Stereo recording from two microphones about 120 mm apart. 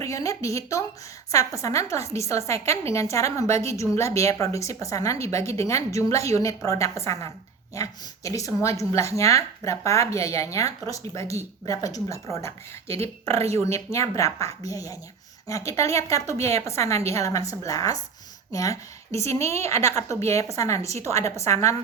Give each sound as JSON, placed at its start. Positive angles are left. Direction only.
{"t": 0.0, "sound": "speech", "side_deg": 25}